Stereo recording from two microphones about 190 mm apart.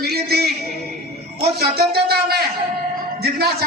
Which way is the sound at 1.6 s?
55° right (ahead or behind).